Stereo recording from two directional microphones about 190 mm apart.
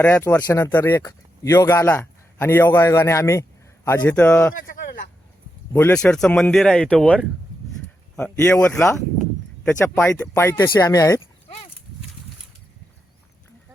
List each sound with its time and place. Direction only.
0.0 s speech: 10° left (ahead or behind)
4.6 s a sound: 50° left (ahead or behind)
5.7 s speech: 10° left (ahead or behind)